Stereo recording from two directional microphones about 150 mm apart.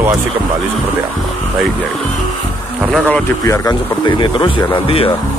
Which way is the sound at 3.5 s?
25° left (ahead or behind).